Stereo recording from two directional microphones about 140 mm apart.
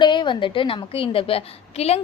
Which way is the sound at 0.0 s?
35° left (ahead or behind).